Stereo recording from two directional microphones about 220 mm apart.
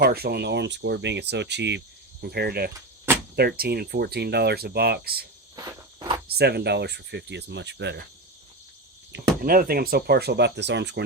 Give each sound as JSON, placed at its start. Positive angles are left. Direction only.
{"t": 0.0, "sound": "speech", "side_deg": -45}
{"t": 5.5, "sound": "cricket", "side_deg": -15}
{"t": 6.2, "sound": "speech", "side_deg": -45}
{"t": 9.4, "sound": "speech", "side_deg": -40}